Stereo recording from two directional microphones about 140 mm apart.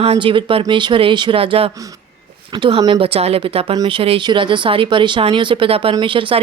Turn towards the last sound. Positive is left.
turn(degrees=-40)  # may be behind; listen again after turning